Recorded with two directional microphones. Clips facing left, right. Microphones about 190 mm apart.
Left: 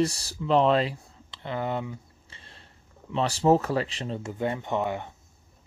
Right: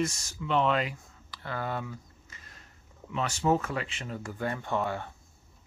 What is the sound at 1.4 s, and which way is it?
Speech, 20° left (ahead or behind).